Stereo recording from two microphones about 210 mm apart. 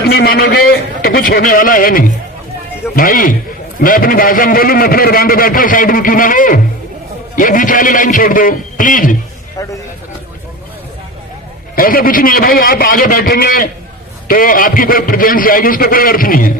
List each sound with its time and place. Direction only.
0.0 s a man's voice: 45° left (ahead or behind)
9.6 s a man's voice: 15° left (ahead or behind)
11.8 s a man's voice: 45° left (ahead or behind)